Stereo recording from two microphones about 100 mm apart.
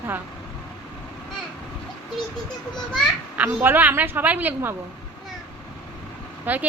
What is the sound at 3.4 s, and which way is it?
A woman's voice, 20° right (ahead or behind).